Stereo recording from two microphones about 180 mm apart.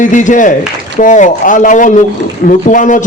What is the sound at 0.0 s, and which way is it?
A man's voice, 45° left (ahead or behind).